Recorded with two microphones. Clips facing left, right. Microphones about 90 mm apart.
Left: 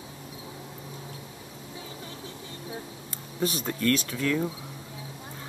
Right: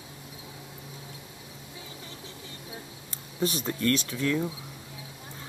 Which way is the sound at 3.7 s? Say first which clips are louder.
Left 1 dB; 30° right (ahead or behind).